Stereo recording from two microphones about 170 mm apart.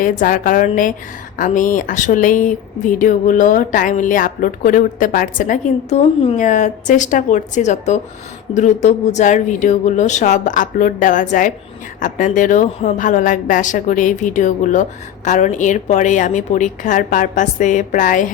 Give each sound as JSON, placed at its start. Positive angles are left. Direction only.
{"t": 0.0, "sound": "speech", "side_deg": 55}